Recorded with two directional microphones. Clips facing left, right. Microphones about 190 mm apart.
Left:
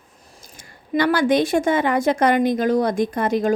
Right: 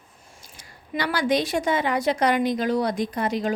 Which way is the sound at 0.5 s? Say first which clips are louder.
Left 8 dB; 50° left (ahead or behind).